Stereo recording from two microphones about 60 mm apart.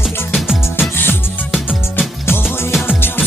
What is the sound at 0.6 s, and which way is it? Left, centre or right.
Music, left.